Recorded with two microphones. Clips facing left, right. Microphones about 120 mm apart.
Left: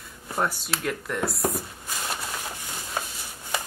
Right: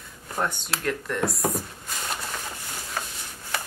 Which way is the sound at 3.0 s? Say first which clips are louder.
Left 2 dB; 20° left (ahead or behind).